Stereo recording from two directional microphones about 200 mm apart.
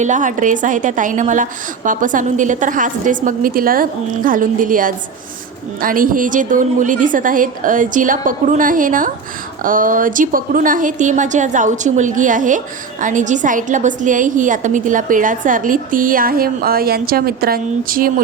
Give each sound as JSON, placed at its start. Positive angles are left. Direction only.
{"t": 0.0, "sound": "speech", "side_deg": -40}